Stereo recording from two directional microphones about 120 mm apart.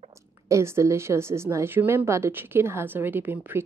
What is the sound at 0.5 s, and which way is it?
A woman's voice, 25° right (ahead or behind).